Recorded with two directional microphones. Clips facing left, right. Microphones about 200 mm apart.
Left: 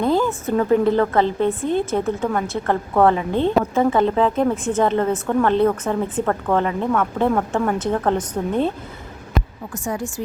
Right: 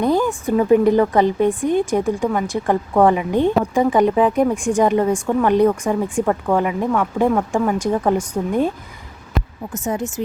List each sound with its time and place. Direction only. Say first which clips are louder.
0.0 s a woman's voice: right 1 dB; 15° right (ahead or behind)
9.7 s speech: right 3 dB; 20° right (ahead or behind)